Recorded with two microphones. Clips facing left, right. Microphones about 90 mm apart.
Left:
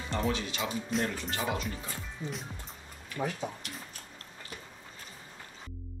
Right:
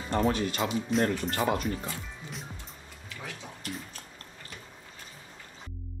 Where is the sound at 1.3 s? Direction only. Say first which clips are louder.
Right 5 dB; 50° right (ahead or behind).